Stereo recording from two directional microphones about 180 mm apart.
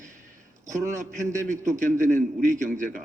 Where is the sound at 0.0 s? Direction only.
45° right (ahead or behind).